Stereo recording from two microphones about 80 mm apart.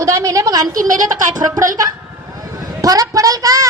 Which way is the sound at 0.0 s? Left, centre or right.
Right.